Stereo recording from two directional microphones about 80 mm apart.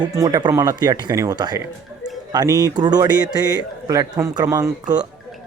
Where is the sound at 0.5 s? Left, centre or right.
Right.